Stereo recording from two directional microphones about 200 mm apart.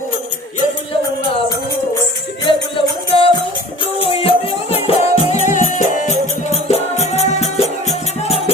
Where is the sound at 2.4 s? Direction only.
25° left (ahead or behind).